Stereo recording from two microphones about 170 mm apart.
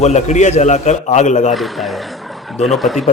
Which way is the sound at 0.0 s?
40° left (ahead or behind).